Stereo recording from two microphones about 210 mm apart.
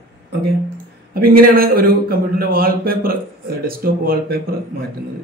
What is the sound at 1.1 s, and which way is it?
A man's voice, 45° right (ahead or behind).